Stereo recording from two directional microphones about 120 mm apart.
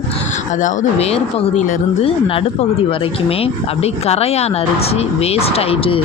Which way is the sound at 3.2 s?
55° left (ahead or behind).